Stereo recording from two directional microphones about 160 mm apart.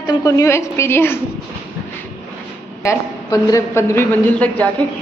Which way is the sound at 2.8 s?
20° left (ahead or behind).